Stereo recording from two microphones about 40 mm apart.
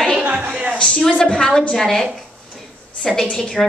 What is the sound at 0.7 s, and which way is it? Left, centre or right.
Speech, left.